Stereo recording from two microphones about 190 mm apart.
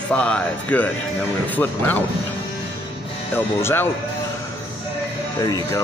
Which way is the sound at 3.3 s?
10° left (ahead or behind).